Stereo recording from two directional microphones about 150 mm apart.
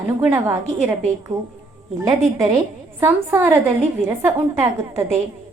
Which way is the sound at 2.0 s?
20° right (ahead or behind).